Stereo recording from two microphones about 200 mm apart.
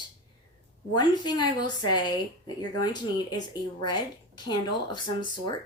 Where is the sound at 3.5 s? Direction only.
20° left (ahead or behind).